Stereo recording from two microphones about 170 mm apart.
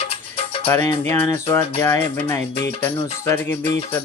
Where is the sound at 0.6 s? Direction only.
15° left (ahead or behind).